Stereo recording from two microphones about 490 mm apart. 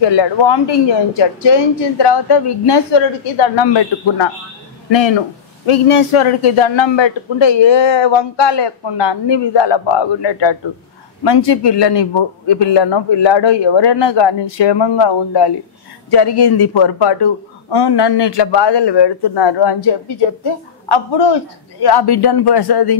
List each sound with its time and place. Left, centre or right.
0.0 s a man's voice: left
5.7 s a man's voice: left